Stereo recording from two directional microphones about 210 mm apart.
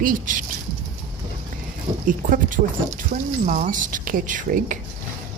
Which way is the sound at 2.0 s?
40° right (ahead or behind).